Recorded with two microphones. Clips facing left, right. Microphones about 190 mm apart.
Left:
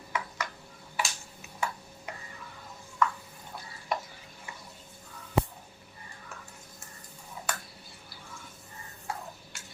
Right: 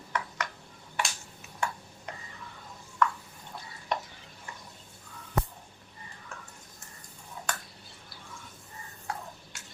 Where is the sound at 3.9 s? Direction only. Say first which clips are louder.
Even; 5° left (ahead or behind).